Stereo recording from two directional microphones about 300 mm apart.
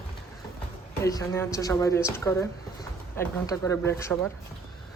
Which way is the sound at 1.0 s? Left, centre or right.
Centre.